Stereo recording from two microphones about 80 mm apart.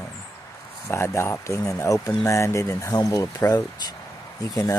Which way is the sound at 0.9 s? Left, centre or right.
Left.